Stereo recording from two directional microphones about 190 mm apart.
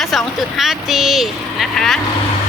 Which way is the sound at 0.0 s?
Centre (ahead or behind).